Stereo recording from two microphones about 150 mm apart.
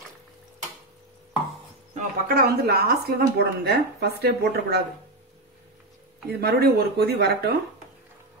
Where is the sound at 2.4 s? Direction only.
90° right.